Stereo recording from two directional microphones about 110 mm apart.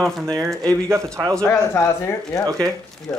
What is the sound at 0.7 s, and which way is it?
Speech, 25° right (ahead or behind).